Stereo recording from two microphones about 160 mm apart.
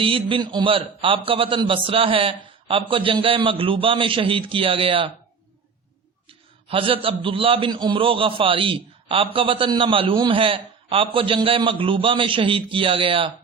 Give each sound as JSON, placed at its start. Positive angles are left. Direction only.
{"t": 0.0, "sound": "a man's voice", "side_deg": -35}
{"t": 6.2, "sound": "a man's voice", "side_deg": -35}